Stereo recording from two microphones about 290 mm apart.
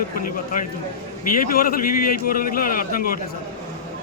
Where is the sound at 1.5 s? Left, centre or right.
Left.